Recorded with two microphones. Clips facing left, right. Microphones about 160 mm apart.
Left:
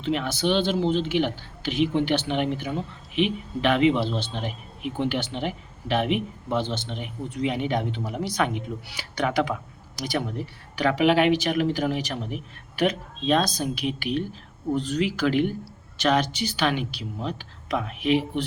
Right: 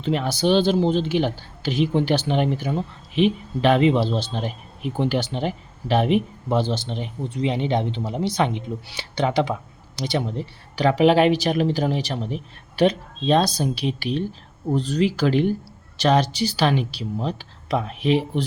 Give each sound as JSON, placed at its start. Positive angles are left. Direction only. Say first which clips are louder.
{"t": 0.0, "sound": "speech", "louder": "right 3 dB", "side_deg": -35}